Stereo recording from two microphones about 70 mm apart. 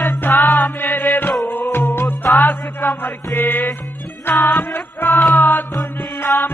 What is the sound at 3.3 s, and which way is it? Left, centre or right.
Music, left.